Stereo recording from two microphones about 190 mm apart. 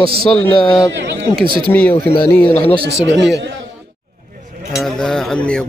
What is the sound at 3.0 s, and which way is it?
Speech, 75° right (ahead or behind).